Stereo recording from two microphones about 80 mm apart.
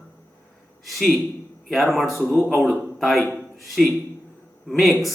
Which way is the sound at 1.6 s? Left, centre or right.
Centre.